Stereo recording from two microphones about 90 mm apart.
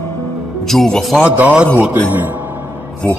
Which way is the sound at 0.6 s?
5° left (ahead or behind).